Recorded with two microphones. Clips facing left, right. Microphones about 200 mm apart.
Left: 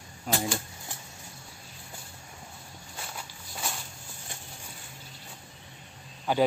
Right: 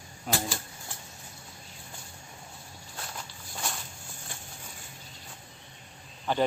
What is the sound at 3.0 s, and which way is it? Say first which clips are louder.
Walk: even; 5° left (ahead or behind).